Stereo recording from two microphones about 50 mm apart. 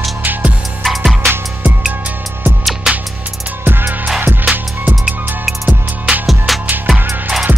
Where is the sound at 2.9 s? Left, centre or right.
Centre.